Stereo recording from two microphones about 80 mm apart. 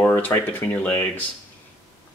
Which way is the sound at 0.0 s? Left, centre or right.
Left.